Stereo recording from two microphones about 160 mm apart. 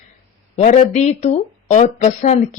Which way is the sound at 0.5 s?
50° left (ahead or behind).